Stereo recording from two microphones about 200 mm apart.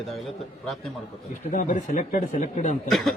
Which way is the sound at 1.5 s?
40° left (ahead or behind).